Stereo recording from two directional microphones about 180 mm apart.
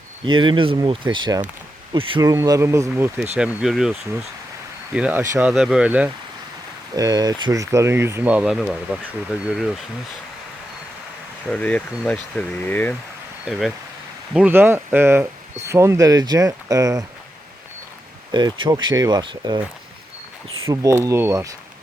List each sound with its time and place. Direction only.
0.3 s speech: 25° right (ahead or behind)
3.3 s speech: 5° right (ahead or behind)
4.9 s speech: 5° right (ahead or behind)
6.9 s speech: 20° right (ahead or behind); by 9.8 s centre (ahead or behind)
11.4 s speech: 5° left (ahead or behind)
13.5 s speech: centre (ahead or behind); by 17.1 s 20° right (ahead or behind)
18.3 s speech: 20° right (ahead or behind)
20.7 s speech: 15° right (ahead or behind)